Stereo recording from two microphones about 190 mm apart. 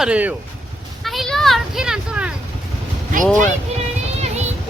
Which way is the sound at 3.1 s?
45° right (ahead or behind).